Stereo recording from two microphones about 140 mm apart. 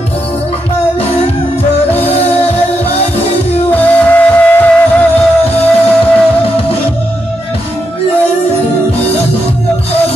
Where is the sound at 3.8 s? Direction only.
10° left (ahead or behind).